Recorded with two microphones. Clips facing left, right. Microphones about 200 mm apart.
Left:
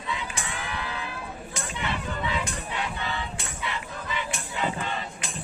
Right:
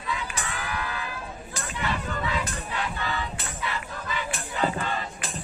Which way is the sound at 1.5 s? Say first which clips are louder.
Right 2 dB; 25° left (ahead or behind).